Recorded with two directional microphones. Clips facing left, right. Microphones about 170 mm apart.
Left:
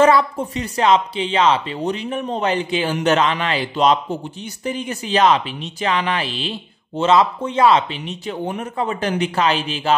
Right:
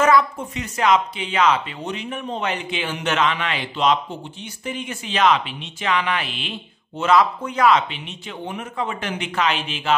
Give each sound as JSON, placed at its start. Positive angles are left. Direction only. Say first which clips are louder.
{"t": 0.0, "sound": "speech", "louder": "left 3 dB", "side_deg": 30}